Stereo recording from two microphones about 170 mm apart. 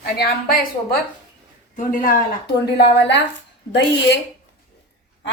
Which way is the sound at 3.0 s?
90° left.